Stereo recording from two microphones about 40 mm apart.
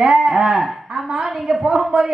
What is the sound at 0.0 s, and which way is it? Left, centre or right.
A man's voice, right.